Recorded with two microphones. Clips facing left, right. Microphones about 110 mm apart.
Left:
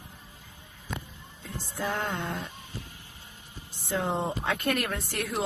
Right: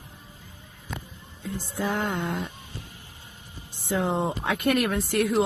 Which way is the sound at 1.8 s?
15° right (ahead or behind).